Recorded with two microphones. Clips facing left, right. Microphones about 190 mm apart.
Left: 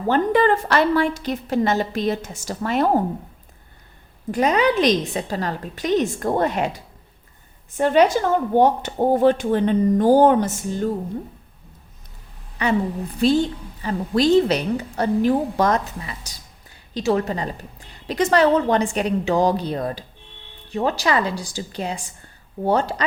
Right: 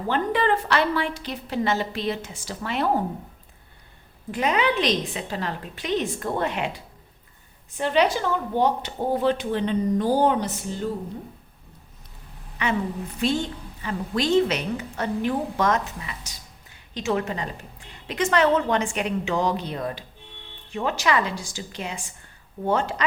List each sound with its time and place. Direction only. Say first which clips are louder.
0.1 s a woman's voice: left 5 dB; 45° left (ahead or behind)
4.3 s a woman's voice: left 5 dB; 40° left (ahead or behind)
12.6 s a woman's voice: left 5 dB; 35° left (ahead or behind)